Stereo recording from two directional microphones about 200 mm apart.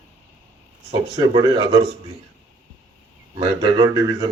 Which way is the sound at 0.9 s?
20° right (ahead or behind).